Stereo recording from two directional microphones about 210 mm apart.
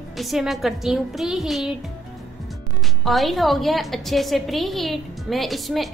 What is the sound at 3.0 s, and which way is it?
A woman's voice, centre (ahead or behind).